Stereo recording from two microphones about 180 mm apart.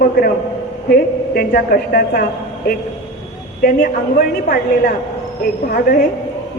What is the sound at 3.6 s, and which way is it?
A woman's voice, 55° left (ahead or behind).